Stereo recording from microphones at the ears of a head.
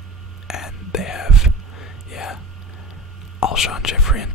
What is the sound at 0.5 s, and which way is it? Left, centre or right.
Whispering, left.